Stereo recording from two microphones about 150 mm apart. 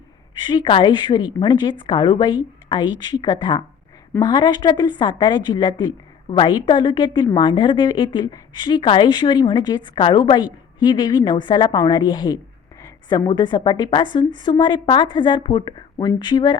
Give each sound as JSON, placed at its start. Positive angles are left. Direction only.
{"t": 0.4, "sound": "a woman's voice", "side_deg": 35}